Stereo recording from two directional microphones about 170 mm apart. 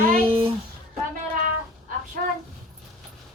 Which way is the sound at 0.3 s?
30° right (ahead or behind).